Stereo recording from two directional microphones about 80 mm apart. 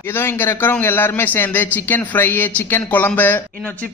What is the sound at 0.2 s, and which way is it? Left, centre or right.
A man's voice, left.